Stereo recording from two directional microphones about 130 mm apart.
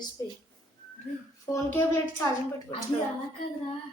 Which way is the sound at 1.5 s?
15° left (ahead or behind).